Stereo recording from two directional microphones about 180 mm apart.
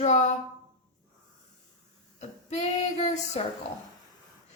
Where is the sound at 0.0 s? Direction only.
40° left (ahead or behind).